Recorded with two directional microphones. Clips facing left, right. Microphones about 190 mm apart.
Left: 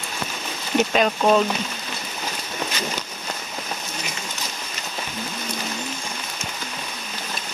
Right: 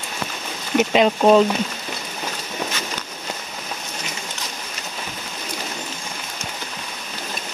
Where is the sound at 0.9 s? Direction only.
25° right (ahead or behind).